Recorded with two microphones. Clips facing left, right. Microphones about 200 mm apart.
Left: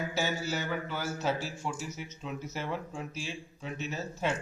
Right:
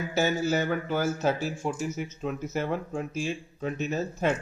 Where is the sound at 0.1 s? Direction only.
50° right (ahead or behind).